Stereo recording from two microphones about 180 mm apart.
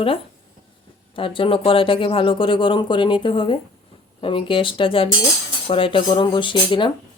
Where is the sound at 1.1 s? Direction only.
30° left (ahead or behind).